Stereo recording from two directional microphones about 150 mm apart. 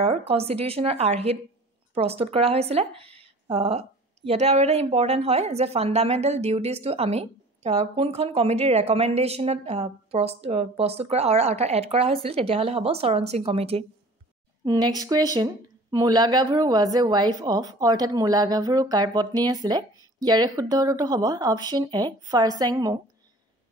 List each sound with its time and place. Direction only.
0.0 s a woman's voice: 40° right (ahead or behind)
14.6 s speech: 25° right (ahead or behind)